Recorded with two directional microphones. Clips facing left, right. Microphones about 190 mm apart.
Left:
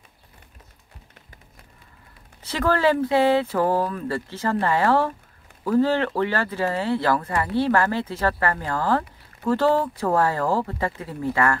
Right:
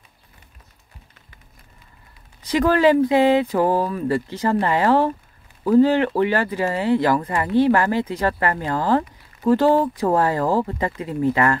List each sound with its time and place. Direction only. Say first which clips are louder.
2.4 s speech: right 5 dB; 15° right (ahead or behind)